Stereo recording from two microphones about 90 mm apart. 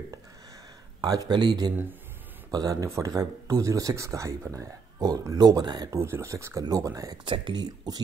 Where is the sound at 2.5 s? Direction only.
45° right (ahead or behind).